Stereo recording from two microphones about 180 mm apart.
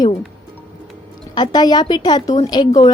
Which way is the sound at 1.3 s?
25° left (ahead or behind).